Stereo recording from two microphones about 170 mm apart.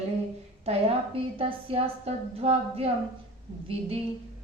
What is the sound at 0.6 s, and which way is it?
A woman's voice, 35° right (ahead or behind).